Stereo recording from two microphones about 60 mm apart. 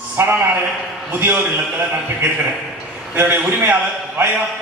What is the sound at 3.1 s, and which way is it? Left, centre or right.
A man's voice, right.